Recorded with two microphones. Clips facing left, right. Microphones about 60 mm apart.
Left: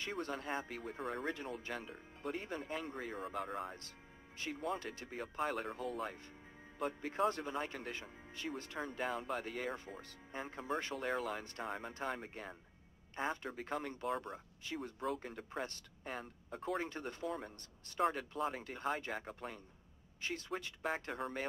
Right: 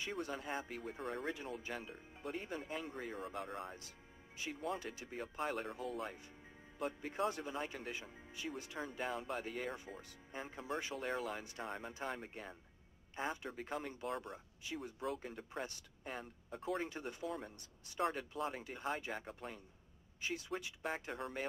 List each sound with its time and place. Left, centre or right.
0.3 s speech: centre
7.9 s speech: centre
8.7 s speech: centre
20.2 s a woman's voice: centre
21.1 s speech: centre